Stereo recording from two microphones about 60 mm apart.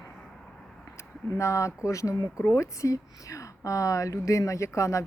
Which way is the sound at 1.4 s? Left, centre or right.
Left.